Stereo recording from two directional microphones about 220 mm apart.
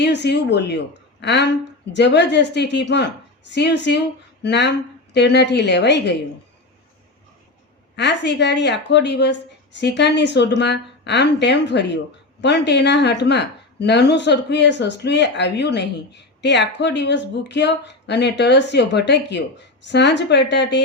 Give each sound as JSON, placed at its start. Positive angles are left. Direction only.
{"t": 0.0, "sound": "a woman's voice", "side_deg": 50}
{"t": 7.9, "sound": "a woman's voice", "side_deg": 50}